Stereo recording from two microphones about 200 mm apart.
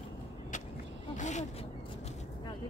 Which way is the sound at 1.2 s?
35° left (ahead or behind).